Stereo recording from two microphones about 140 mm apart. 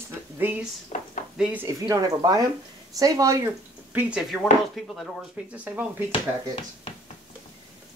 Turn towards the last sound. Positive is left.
turn(degrees=45)  # may be behind; listen again after turning